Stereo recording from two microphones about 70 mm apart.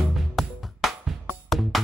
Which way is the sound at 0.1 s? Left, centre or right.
Centre.